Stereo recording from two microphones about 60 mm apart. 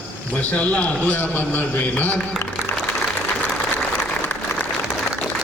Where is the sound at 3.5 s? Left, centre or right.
Centre.